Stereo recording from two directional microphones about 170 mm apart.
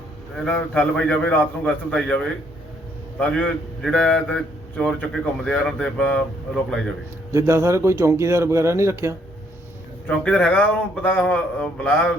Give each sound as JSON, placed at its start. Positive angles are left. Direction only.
{"t": 0.3, "sound": "a man's voice", "side_deg": 5}
{"t": 7.3, "sound": "speech", "side_deg": -15}
{"t": 10.1, "sound": "a man's voice", "side_deg": 5}